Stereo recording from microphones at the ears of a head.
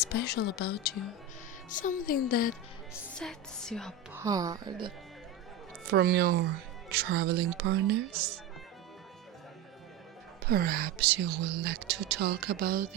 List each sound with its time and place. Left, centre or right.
0.0 s a woman's voice: left
3.2 s speech: centre
4.2 s speech: right
10.4 s speech: right